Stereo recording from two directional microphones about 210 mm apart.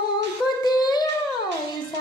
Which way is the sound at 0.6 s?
20° left (ahead or behind).